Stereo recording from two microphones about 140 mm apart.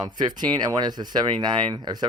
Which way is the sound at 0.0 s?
30° right (ahead or behind).